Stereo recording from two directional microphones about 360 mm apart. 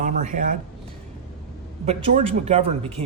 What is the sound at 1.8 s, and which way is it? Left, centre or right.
Speech, centre.